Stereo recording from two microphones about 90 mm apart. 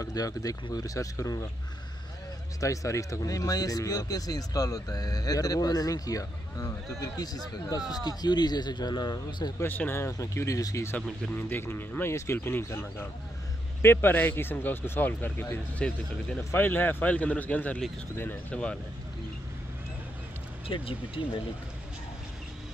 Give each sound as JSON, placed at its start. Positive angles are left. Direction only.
{"t": 0.0, "sound": "speech", "side_deg": 40}
{"t": 2.6, "sound": "speech", "side_deg": 35}
{"t": 9.6, "sound": "speech", "side_deg": 20}
{"t": 11.3, "sound": "a man's voice", "side_deg": 25}
{"t": 16.3, "sound": "a man's voice", "side_deg": 20}
{"t": 18.5, "sound": "a man's voice", "side_deg": 10}
{"t": 20.6, "sound": "speech", "side_deg": 85}